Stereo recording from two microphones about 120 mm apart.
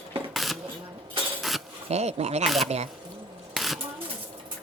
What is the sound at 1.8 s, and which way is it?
Speech, 65° right (ahead or behind).